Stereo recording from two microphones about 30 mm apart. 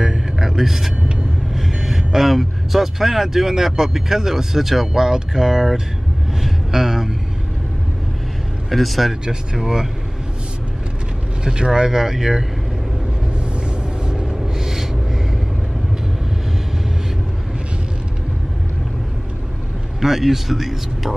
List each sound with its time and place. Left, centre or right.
0.0 s a sound: centre
0.6 s speech: centre
6.4 s a sound: centre
8.6 s speech: centre
9.2 s speech: right
11.4 s speech: right
13.7 s vehicle: right
14.3 s a sound: centre
20.0 s speech: centre